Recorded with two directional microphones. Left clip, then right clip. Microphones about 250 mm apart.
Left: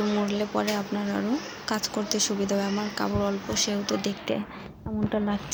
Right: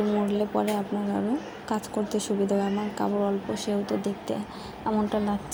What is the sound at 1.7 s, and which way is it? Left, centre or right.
Speech, centre.